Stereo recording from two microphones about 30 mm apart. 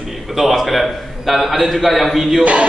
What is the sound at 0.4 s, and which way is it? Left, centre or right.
A man's voice, centre.